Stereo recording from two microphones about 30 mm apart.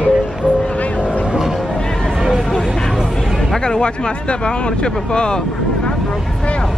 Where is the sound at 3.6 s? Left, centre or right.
Left.